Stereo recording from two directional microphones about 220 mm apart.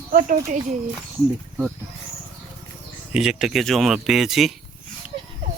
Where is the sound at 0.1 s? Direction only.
35° right (ahead or behind).